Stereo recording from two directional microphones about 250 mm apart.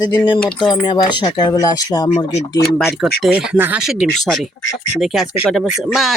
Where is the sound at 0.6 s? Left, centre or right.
Centre.